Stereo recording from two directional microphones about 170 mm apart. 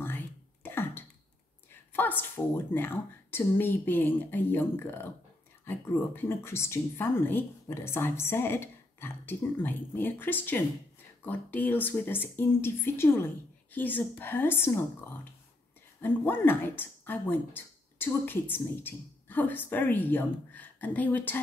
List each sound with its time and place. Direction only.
0.7 s a sound: 15° left (ahead or behind)
1.9 s speech: 10° left (ahead or behind)
16.0 s speech: 10° left (ahead or behind)